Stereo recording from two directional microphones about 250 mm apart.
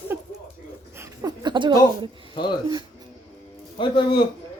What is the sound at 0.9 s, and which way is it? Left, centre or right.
Speech, centre.